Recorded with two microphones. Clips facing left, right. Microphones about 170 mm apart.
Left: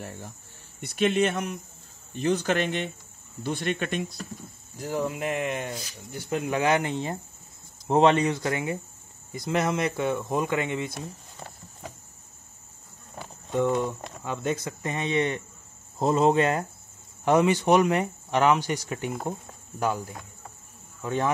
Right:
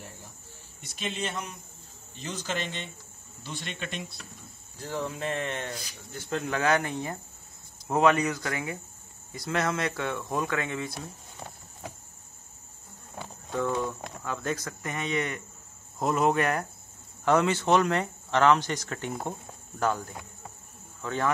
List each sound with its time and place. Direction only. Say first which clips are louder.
0.7 s speech: left 12 dB; 60° left (ahead or behind); by 4.3 s 45° left (ahead or behind)
4.7 s speech: left 4 dB; 10° left (ahead or behind)
11.3 s a sound: even; 5° right (ahead or behind)
13.5 s speech: left 4 dB; 15° left (ahead or behind)